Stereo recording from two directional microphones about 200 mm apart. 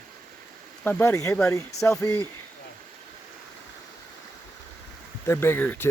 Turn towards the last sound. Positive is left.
turn(degrees=10)  # may be behind; listen again after turning